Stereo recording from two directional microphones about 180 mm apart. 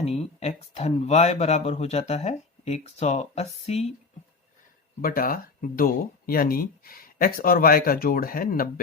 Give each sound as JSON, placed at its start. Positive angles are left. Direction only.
{"t": 0.0, "sound": "speech", "side_deg": 35}
{"t": 5.0, "sound": "speech", "side_deg": 55}